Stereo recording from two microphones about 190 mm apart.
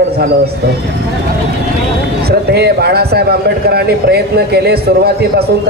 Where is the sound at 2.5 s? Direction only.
55° right (ahead or behind).